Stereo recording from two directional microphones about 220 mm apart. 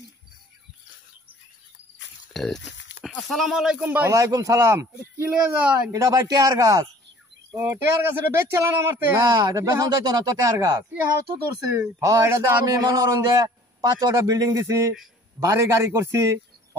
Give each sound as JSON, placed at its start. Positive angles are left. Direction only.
{"t": 2.3, "sound": "speech", "side_deg": 0}
{"t": 2.6, "sound": "a sound", "side_deg": 55}
{"t": 3.0, "sound": "speech", "side_deg": 0}